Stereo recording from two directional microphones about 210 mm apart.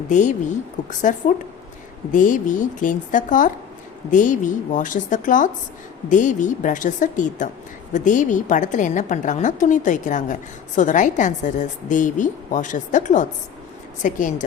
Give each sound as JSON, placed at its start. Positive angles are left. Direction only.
{"t": 0.1, "sound": "a woman's voice", "side_deg": 35}